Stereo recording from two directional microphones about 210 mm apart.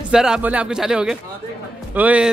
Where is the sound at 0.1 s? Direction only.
5° right (ahead or behind).